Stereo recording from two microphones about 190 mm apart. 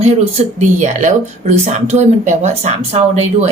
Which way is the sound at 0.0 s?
35° right (ahead or behind).